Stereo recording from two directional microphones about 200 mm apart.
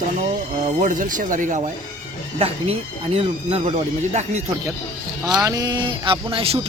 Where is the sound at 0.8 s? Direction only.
40° right (ahead or behind).